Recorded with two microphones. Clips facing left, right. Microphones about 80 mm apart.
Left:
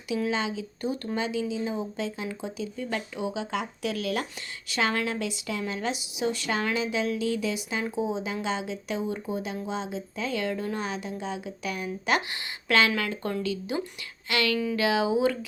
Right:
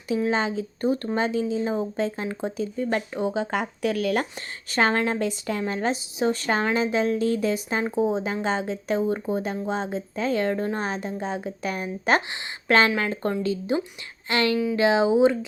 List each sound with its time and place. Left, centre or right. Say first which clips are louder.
0.3 s a woman's voice: right 5 dB; right
4.7 s a woman's voice: right 5 dB; right